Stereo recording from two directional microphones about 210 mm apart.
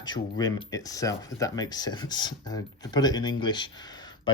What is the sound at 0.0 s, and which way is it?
Speech, 20° left (ahead or behind).